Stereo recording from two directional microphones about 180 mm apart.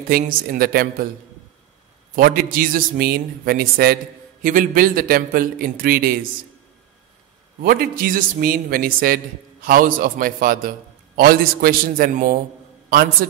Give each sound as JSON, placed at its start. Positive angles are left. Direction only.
{"t": 0.1, "sound": "a man's voice", "side_deg": -50}
{"t": 2.1, "sound": "a man's voice", "side_deg": -55}
{"t": 7.6, "sound": "a man's voice", "side_deg": -55}